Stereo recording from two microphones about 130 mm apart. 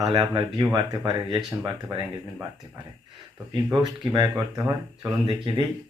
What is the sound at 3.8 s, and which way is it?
Speech, 30° right (ahead or behind).